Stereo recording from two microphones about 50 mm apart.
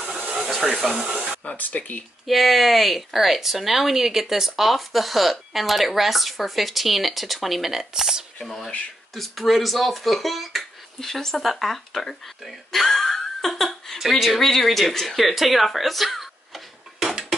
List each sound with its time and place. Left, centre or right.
0.7 s speech: centre
1.6 s speech: left
2.2 s a woman's voice: centre
8.4 s a woman's voice: centre